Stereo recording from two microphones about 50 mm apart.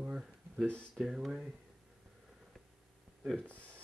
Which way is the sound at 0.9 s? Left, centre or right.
Centre.